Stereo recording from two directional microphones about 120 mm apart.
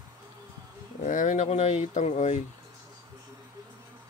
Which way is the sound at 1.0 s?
90° left.